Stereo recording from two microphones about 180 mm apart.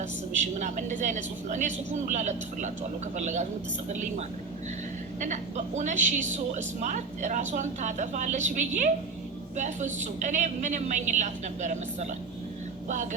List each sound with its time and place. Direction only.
0.6 s a woman's voice: 45° right (ahead or behind)
5.2 s a woman's voice: 40° right (ahead or behind)